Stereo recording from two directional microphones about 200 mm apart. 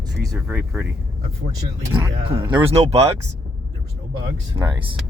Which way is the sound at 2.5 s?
25° right (ahead or behind).